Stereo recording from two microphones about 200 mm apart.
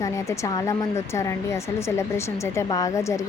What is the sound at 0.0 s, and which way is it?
Speech, 15° left (ahead or behind).